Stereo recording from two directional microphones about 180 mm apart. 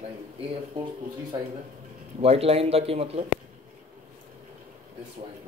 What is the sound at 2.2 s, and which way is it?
Speech, 35° right (ahead or behind).